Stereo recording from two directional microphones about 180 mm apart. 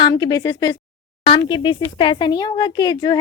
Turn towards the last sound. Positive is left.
turn(degrees=20)  # may be behind; listen again after turning